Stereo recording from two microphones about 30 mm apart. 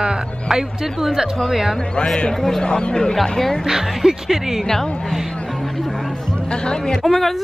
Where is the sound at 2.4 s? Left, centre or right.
Centre.